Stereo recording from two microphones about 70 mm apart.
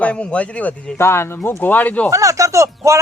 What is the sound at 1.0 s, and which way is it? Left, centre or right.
Speech, left.